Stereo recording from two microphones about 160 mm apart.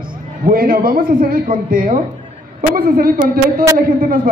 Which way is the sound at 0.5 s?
65° right (ahead or behind).